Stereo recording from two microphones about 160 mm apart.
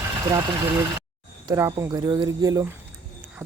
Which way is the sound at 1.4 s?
20° right (ahead or behind).